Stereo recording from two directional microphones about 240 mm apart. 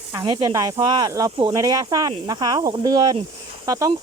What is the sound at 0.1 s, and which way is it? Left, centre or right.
Speech, centre.